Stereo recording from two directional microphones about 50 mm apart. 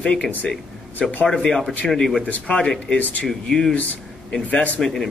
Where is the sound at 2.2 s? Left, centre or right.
Left.